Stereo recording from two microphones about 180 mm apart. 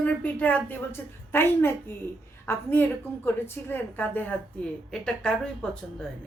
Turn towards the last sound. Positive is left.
turn(degrees=5)  # may be behind; listen again after turning